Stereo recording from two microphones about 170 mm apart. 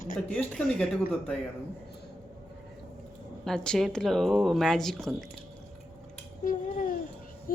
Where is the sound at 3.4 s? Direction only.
5° left (ahead or behind).